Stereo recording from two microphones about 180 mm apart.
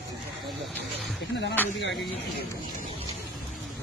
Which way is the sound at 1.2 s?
80° left.